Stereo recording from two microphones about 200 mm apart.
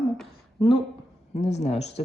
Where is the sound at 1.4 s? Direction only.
35° left (ahead or behind).